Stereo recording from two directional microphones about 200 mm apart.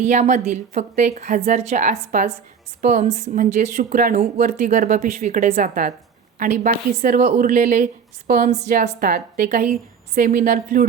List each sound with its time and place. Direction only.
0.0 s speech: 35° right (ahead or behind)